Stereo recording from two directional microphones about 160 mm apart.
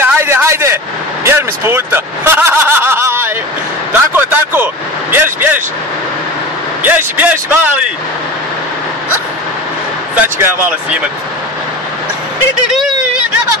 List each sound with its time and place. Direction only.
0.0 s vehicle: 15° right (ahead or behind)
1.2 s snicker: 15° right (ahead or behind)
4.1 s a sound: 10° right (ahead or behind)
5.1 s vehicle: 15° right (ahead or behind)
6.8 s a man's voice: 10° right (ahead or behind)
10.1 s a man's voice: 15° right (ahead or behind)
12.7 s a sound: centre (ahead or behind)